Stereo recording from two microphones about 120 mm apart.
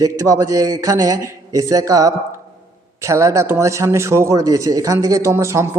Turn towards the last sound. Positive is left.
turn(degrees=-25)  # may be behind; listen again after turning